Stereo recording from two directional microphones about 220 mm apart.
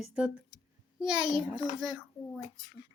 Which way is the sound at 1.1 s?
20° right (ahead or behind).